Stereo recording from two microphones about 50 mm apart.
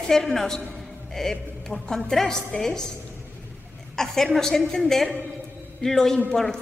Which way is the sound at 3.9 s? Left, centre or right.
Centre.